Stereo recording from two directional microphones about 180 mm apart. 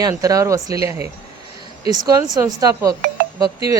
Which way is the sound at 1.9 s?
20° right (ahead or behind).